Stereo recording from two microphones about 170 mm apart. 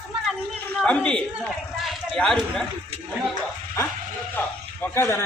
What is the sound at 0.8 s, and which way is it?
A man's voice, 5° left (ahead or behind).